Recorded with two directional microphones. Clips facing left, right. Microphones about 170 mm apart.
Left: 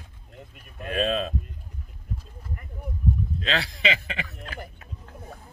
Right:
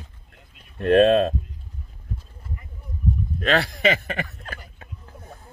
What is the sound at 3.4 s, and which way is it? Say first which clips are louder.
Speech: right 7 dB; 55° right (ahead or behind).